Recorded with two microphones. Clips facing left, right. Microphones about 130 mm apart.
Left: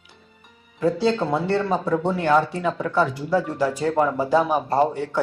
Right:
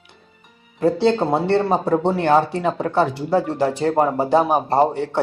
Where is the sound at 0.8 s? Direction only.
60° right (ahead or behind).